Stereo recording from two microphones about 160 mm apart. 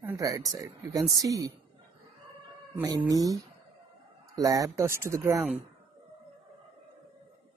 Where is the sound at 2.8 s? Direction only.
25° right (ahead or behind).